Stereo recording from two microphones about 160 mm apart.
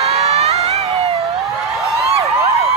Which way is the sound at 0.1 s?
40° right (ahead or behind).